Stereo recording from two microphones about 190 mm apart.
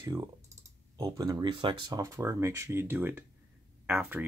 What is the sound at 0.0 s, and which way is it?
Speech, 15° right (ahead or behind).